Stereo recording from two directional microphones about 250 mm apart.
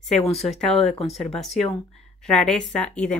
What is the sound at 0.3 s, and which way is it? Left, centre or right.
Speech, left.